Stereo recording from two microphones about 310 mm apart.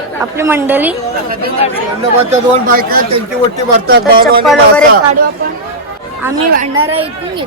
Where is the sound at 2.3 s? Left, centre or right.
Right.